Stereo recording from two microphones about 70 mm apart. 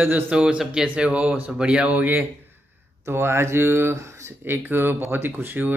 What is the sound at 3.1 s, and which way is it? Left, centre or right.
A man's voice, right.